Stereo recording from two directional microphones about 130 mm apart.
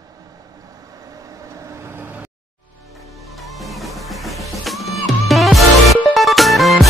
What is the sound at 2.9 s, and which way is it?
Music, centre (ahead or behind).